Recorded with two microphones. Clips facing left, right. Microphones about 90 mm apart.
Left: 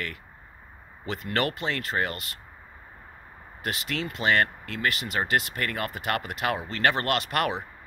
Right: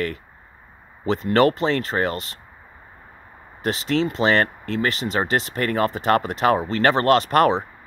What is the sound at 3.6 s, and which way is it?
Speech, 30° right (ahead or behind).